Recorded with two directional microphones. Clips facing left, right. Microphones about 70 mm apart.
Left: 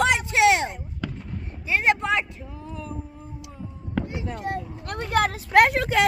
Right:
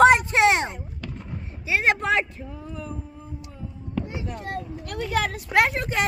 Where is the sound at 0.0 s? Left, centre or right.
Right.